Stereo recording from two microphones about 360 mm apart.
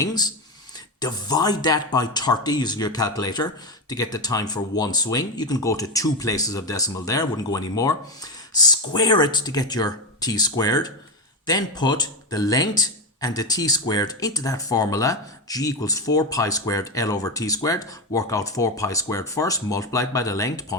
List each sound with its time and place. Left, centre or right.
0.0 s speech: centre